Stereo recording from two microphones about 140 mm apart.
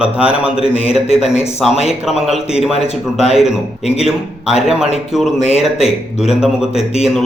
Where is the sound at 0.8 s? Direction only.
45° left (ahead or behind).